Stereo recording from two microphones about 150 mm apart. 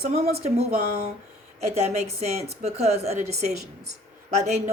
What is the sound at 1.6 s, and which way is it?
A woman's voice, 45° right (ahead or behind).